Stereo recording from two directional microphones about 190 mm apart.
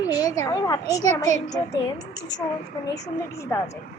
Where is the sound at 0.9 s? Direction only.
20° left (ahead or behind).